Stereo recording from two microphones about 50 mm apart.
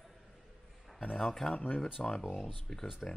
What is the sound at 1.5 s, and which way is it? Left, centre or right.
Speech, left.